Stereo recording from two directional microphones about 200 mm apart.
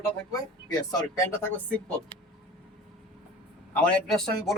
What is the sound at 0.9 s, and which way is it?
Speech, 15° left (ahead or behind).